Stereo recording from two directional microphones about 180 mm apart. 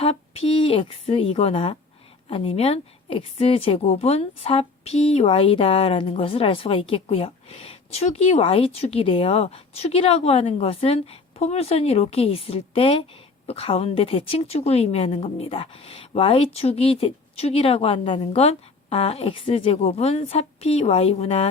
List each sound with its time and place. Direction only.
0.0 s a woman's voice: 35° left (ahead or behind)